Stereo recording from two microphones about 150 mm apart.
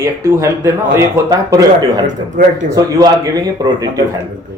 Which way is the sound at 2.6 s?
25° right (ahead or behind).